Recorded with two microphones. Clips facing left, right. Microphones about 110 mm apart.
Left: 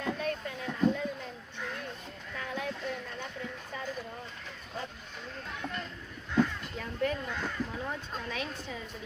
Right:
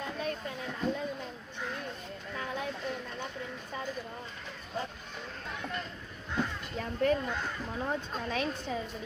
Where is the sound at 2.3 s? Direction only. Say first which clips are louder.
Even; 25° right (ahead or behind).